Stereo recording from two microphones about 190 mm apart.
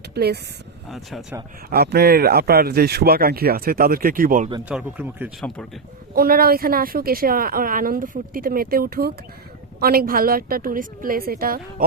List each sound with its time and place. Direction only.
0.1 s speech: 55° right (ahead or behind)
0.9 s speech: centre (ahead or behind)
1.7 s a woman's voice: 55° right (ahead or behind)
4.7 s speech: 10° right (ahead or behind)
6.1 s a woman's voice: 50° right (ahead or behind)